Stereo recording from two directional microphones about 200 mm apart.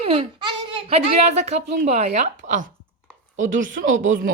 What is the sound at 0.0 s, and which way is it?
A child's voice, 25° right (ahead or behind).